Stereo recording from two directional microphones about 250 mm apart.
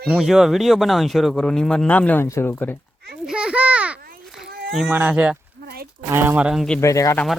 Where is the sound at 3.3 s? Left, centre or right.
Centre.